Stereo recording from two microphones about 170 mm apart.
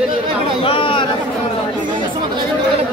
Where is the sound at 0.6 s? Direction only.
30° left (ahead or behind).